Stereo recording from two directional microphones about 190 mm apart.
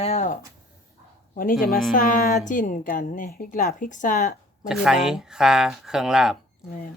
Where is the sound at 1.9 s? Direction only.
45° left (ahead or behind).